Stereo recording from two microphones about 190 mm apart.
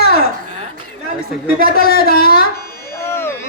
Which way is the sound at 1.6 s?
50° left (ahead or behind).